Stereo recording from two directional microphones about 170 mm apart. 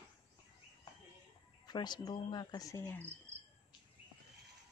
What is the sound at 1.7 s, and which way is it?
Speech, 25° left (ahead or behind).